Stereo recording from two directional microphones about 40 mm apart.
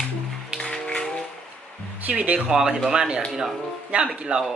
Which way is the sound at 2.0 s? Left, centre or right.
Right.